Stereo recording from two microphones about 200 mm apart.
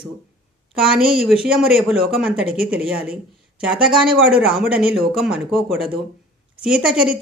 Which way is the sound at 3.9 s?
5° right (ahead or behind).